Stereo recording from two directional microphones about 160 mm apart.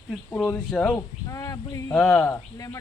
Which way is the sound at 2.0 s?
5° left (ahead or behind).